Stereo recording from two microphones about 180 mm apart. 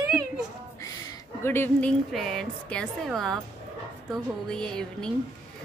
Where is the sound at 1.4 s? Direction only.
10° left (ahead or behind).